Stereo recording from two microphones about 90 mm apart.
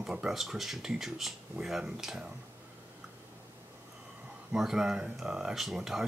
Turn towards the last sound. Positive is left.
turn(degrees=-5)  # may be behind; listen again after turning